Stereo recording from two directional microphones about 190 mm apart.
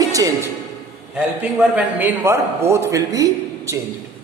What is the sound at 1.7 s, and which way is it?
A man's voice, 10° right (ahead or behind).